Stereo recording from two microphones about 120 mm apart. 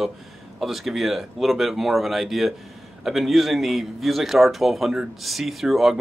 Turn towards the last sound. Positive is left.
turn(degrees=0)  # may be behind; listen again after turning